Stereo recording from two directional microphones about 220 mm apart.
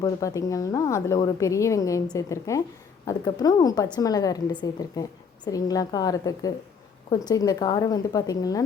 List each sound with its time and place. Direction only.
0.0 s a woman's voice: 15° left (ahead or behind)